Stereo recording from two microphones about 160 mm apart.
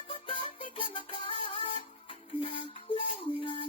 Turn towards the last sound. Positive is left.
turn(degrees=35)  # may be behind; listen again after turning